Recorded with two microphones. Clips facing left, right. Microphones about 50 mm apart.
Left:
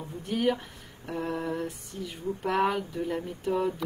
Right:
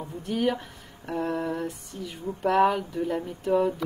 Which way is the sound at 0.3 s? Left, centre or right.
Centre.